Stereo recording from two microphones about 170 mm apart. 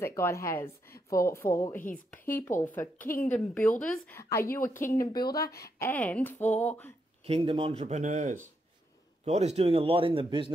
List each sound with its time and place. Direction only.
0.0 s a woman's voice: 15° left (ahead or behind)
7.2 s a man's voice: 35° right (ahead or behind)